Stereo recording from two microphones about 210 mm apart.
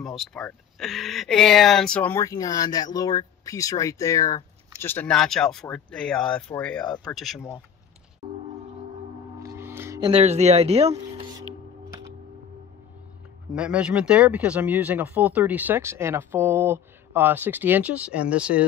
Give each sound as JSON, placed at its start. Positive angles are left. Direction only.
{"t": 0.0, "sound": "speech", "side_deg": 0}
{"t": 9.4, "sound": "music", "side_deg": -15}
{"t": 13.6, "sound": "speech", "side_deg": -5}